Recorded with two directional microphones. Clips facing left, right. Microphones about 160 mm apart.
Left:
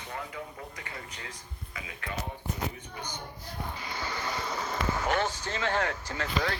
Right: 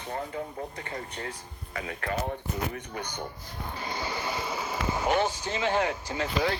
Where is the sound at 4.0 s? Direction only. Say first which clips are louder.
Right 1 dB; 10° right (ahead or behind).